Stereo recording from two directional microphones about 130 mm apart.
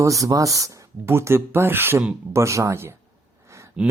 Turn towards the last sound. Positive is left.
turn(degrees=-10)  # may be behind; listen again after turning